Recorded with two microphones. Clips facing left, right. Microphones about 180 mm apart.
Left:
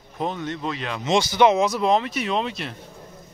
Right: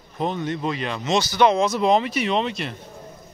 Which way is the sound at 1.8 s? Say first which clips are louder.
Right 2 dB; centre (ahead or behind).